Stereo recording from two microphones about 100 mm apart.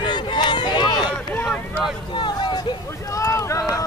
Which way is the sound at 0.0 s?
50° left (ahead or behind).